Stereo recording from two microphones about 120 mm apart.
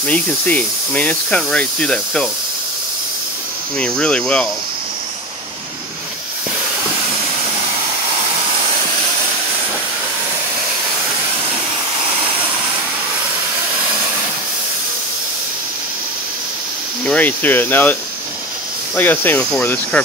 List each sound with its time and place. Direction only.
0.0 s speech: 10° left (ahead or behind)
3.7 s speech: 10° left (ahead or behind)
17.0 s speech: 15° left (ahead or behind)
18.9 s speech: 15° left (ahead or behind)